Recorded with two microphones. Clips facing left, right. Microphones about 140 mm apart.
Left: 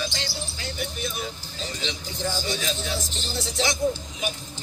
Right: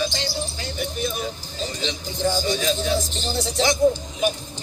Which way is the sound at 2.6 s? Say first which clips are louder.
Right 7 dB; 40° right (ahead or behind).